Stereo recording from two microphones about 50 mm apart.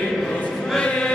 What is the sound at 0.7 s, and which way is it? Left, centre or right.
Music, left.